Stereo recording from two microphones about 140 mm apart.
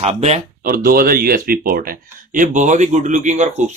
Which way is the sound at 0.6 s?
90° right.